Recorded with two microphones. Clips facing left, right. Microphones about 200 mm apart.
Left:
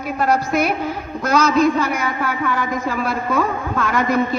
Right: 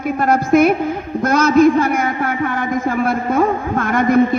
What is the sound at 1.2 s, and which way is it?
A man's voice, 50° right (ahead or behind).